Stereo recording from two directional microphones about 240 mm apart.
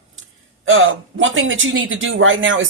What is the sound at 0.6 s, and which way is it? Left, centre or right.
Speech, right.